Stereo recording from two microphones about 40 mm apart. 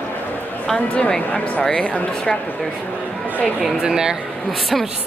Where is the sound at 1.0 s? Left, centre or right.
Left.